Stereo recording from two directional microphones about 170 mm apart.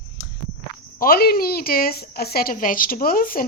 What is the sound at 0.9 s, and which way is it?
A woman's voice, 60° left (ahead or behind).